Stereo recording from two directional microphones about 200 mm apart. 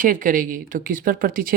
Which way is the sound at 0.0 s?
40° right (ahead or behind).